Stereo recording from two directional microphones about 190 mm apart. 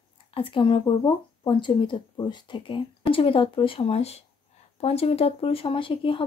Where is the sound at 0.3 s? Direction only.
25° left (ahead or behind).